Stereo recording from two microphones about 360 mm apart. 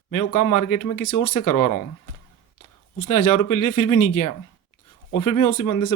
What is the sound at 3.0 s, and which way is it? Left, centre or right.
Speech, left.